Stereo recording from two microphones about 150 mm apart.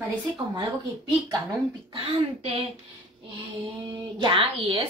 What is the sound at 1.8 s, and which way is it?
Speech, 35° right (ahead or behind).